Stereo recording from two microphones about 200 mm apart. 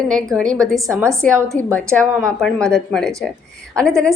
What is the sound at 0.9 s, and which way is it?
Speech, 15° right (ahead or behind).